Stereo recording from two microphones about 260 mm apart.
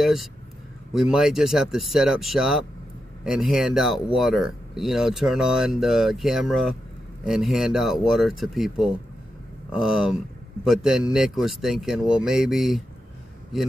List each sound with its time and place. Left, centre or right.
0.0 s speech: centre